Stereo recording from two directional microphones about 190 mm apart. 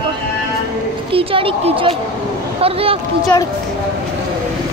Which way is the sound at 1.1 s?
30° right (ahead or behind).